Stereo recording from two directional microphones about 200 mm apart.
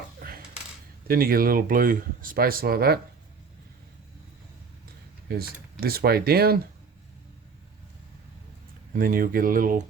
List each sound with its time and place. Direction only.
0.2 s coin: 45° right (ahead or behind)
1.0 s speech: 45° right (ahead or behind)
5.3 s speech: 50° right (ahead or behind)
9.0 s speech: 45° right (ahead or behind)